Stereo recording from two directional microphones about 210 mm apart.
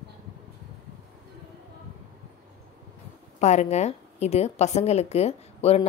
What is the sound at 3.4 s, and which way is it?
A woman's voice, 35° left (ahead or behind).